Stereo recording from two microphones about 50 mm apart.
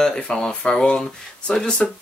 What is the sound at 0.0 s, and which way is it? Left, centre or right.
Speech, centre.